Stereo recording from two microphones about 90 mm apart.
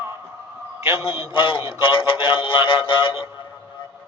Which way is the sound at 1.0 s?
90° left.